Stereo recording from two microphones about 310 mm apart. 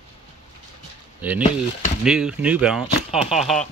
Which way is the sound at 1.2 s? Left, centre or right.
Centre.